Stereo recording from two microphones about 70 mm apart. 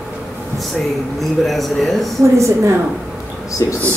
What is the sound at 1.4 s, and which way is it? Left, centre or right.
Speech, centre.